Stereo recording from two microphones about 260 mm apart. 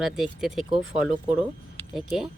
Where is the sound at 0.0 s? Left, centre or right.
Centre.